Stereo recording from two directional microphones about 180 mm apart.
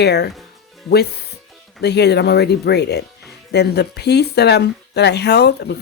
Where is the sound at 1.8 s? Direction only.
70° left (ahead or behind).